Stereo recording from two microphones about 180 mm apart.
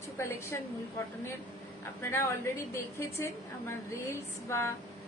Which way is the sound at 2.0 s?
15° left (ahead or behind).